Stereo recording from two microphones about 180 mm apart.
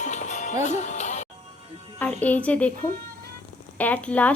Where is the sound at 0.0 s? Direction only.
40° left (ahead or behind).